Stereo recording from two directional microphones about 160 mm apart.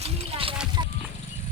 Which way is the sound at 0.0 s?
35° right (ahead or behind).